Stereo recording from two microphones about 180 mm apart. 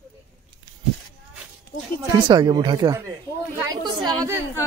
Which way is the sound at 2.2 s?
25° right (ahead or behind).